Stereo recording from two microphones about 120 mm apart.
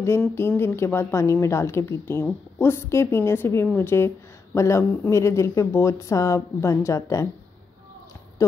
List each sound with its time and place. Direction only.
0.2 s speech: 20° left (ahead or behind)
8.4 s speech: 25° left (ahead or behind)